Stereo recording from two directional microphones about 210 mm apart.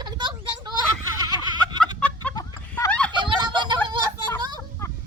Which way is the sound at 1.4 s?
20° right (ahead or behind).